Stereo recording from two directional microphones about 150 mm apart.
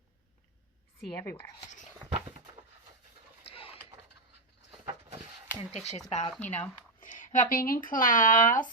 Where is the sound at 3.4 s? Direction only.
40° left (ahead or behind).